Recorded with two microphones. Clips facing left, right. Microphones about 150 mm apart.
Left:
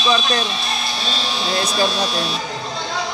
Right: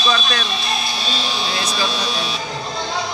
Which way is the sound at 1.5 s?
50° left (ahead or behind).